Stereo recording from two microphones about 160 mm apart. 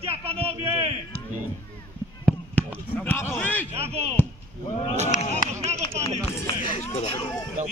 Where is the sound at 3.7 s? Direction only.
40° right (ahead or behind).